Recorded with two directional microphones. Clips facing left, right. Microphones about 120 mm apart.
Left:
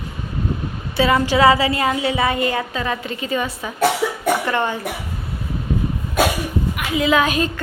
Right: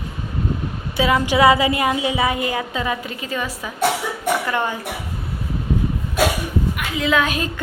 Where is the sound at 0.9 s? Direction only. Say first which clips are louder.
Left 1 dB; 10° right (ahead or behind).